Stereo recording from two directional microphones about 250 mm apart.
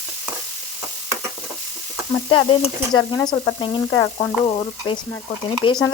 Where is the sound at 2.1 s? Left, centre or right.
Centre.